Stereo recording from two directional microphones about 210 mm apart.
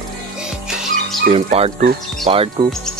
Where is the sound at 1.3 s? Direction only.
30° right (ahead or behind).